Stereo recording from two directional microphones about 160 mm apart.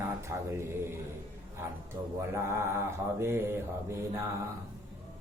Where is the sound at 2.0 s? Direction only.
15° right (ahead or behind).